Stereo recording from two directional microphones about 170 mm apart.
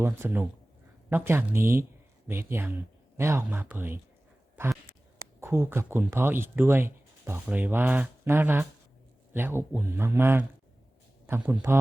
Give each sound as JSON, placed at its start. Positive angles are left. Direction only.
{"t": 0.0, "sound": "speech", "side_deg": -15}